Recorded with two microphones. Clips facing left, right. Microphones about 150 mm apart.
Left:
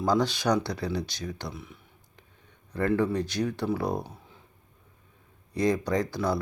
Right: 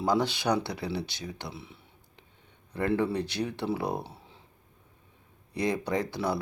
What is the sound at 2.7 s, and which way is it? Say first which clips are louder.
Speech: left 2 dB; 20° right (ahead or behind).